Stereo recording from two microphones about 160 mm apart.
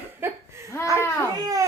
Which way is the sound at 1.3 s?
20° right (ahead or behind).